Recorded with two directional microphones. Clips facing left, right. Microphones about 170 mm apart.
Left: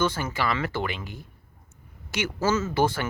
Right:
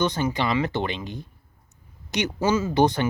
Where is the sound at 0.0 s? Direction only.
20° right (ahead or behind).